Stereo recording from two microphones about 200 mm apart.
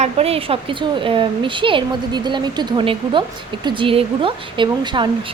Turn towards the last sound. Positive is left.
turn(degrees=-25)  # may be behind; listen again after turning